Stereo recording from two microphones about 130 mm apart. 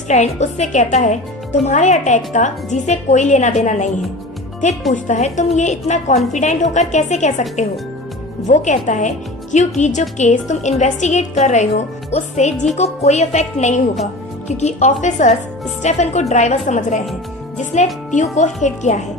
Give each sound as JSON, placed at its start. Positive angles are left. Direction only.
{"t": 0.1, "sound": "a woman's voice", "side_deg": 60}
{"t": 18.1, "sound": "speech", "side_deg": 65}